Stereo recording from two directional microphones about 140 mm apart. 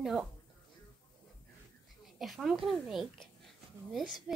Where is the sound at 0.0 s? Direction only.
5° right (ahead or behind).